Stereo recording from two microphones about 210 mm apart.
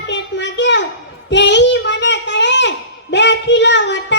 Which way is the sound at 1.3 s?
55° left (ahead or behind).